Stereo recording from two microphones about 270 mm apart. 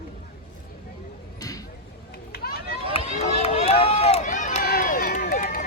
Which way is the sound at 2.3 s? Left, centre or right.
Left.